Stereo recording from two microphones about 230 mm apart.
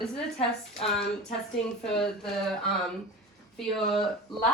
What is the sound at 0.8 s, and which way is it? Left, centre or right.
A woman's voice, centre.